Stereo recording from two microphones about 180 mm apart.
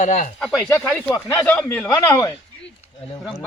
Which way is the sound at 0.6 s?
10° left (ahead or behind).